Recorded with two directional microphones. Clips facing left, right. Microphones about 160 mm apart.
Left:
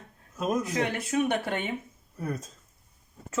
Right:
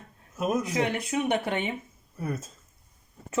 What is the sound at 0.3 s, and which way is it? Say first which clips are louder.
Speech: right 1 dB; 10° right (ahead or behind).